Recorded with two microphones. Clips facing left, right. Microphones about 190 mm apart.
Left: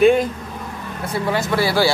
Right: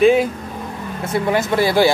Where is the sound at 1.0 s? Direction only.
20° right (ahead or behind).